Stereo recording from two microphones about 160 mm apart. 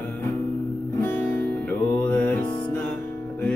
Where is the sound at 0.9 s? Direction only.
10° left (ahead or behind).